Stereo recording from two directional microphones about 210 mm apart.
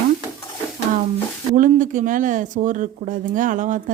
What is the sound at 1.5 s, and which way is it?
Speech, 35° right (ahead or behind).